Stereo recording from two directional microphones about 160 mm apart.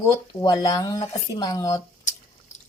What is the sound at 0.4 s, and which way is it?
Speech, 25° left (ahead or behind).